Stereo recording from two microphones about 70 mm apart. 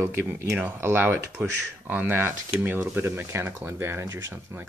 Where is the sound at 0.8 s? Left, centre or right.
Right.